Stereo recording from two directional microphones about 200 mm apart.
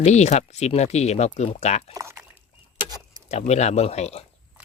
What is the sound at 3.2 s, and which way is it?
Speech, 35° left (ahead or behind).